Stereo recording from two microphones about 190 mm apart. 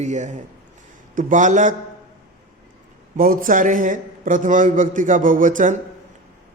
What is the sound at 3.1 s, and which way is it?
A man's voice, 45° right (ahead or behind).